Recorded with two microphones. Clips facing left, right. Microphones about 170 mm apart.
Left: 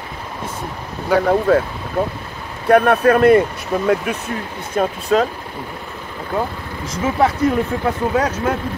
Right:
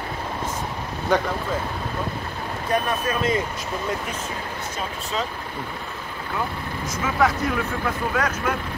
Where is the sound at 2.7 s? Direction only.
65° left (ahead or behind).